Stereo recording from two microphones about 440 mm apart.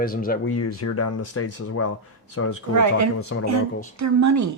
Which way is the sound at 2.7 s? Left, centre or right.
Right.